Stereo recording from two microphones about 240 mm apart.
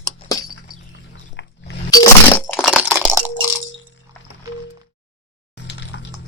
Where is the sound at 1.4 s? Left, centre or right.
Left.